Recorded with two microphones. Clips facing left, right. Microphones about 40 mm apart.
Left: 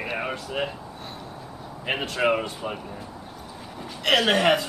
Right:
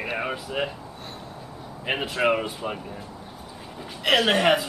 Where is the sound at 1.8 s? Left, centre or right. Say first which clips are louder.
Even; centre.